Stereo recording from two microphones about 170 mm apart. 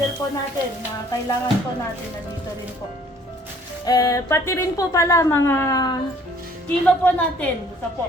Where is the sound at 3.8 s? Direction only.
20° left (ahead or behind).